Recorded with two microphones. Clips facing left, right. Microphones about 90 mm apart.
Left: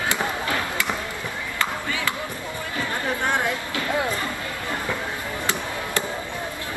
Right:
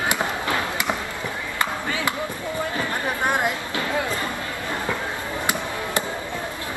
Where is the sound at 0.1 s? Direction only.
20° right (ahead or behind).